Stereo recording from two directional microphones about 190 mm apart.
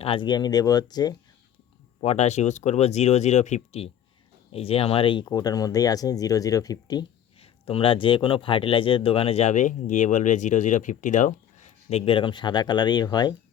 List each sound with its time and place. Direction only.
0.0 s speech: 25° left (ahead or behind)
2.0 s speech: 35° left (ahead or behind)